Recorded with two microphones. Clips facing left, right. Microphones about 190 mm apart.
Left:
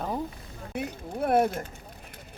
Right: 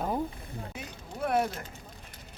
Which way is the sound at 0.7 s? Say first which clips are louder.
Left 10 dB; 50° left (ahead or behind).